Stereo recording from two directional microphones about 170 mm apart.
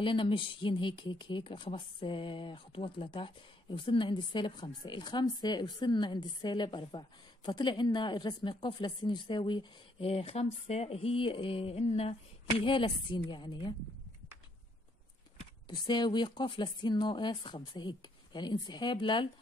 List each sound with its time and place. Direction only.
0.0 s speech: 30° left (ahead or behind)
15.7 s speech: 25° left (ahead or behind)